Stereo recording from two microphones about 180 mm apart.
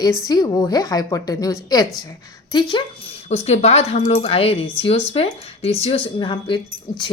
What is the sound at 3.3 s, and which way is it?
Speech, 35° left (ahead or behind).